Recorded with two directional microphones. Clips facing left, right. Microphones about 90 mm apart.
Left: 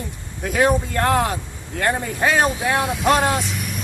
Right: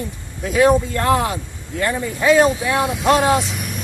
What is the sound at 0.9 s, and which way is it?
Speech, 45° left (ahead or behind).